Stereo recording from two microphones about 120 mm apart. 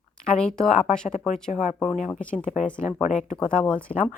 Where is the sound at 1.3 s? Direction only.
75° left (ahead or behind).